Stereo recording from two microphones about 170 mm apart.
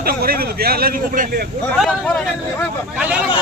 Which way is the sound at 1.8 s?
5° left (ahead or behind).